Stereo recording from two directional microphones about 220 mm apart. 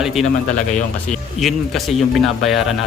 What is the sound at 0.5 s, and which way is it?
Speech, 35° left (ahead or behind).